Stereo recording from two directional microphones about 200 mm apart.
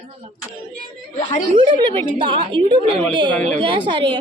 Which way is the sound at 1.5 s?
25° right (ahead or behind).